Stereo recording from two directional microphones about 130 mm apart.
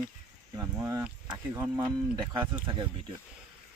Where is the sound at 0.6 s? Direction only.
25° right (ahead or behind).